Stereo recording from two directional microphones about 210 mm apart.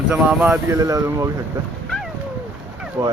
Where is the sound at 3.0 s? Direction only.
15° right (ahead or behind).